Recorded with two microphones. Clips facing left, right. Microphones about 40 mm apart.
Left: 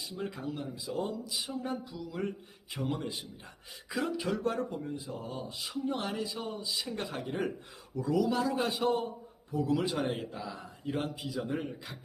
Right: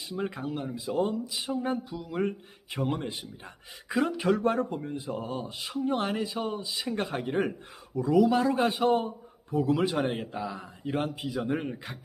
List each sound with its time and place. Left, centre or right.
0.0 s a man's voice: right
11.2 s speech: right